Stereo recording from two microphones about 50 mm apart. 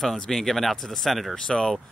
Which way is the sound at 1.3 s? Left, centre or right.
Centre.